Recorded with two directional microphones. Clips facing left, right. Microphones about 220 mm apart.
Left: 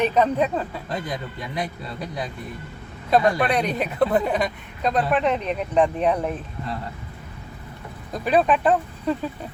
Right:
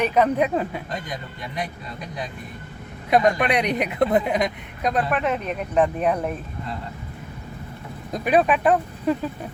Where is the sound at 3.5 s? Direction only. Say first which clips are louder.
Right 1 dB; 15° right (ahead or behind).